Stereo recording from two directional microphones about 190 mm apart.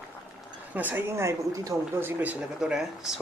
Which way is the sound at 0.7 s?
10° right (ahead or behind).